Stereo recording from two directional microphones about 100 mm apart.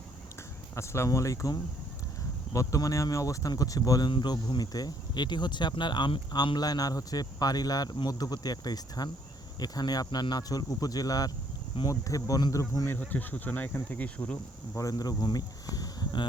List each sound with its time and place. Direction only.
0.8 s speech: 30° left (ahead or behind)
13.0 s speech: 20° left (ahead or behind)
14.8 s speech: 35° left (ahead or behind)